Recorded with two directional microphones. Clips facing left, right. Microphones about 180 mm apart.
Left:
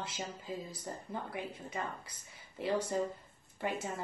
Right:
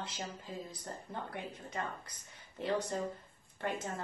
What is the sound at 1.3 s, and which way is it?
Speech, 10° left (ahead or behind).